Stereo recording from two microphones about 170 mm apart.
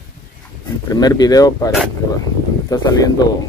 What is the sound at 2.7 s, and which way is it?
Speech, 20° left (ahead or behind).